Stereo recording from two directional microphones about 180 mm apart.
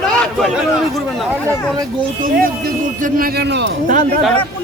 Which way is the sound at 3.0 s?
60° right (ahead or behind).